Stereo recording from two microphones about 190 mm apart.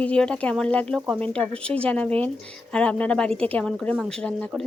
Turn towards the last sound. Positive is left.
turn(degrees=5)  # may be behind; listen again after turning